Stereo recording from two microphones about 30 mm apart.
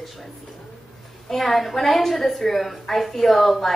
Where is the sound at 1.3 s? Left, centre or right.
Centre.